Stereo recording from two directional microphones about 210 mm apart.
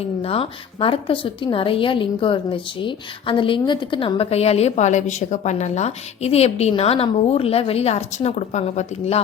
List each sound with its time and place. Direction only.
0.0 s a woman's voice: 25° left (ahead or behind)